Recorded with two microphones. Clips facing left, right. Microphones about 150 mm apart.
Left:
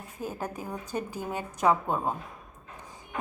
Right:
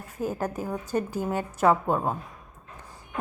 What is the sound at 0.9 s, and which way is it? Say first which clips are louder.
Speech: right 6 dB; 45° right (ahead or behind).